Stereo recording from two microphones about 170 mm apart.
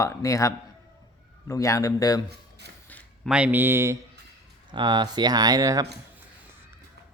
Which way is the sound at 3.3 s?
10° right (ahead or behind).